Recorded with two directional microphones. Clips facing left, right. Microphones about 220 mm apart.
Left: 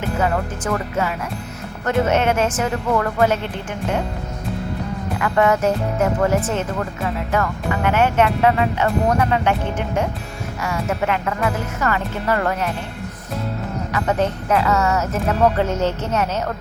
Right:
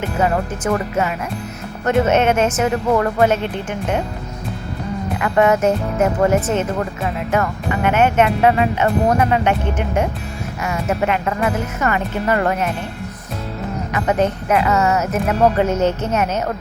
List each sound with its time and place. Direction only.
0.2 s speech: 20° right (ahead or behind)
5.2 s speech: 20° right (ahead or behind)
7.9 s speech: 20° right (ahead or behind)
13.9 s speech: 15° right (ahead or behind)